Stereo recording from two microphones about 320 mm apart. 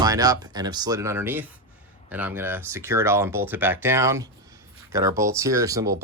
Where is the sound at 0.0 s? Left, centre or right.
Centre.